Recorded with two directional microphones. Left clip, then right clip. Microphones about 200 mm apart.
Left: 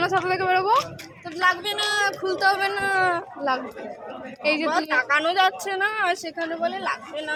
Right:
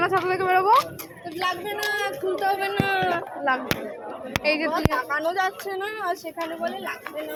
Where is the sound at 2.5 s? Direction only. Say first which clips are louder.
Left 3 dB; 20° left (ahead or behind).